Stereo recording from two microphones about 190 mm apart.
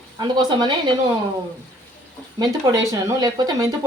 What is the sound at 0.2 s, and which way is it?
Speech, 20° right (ahead or behind).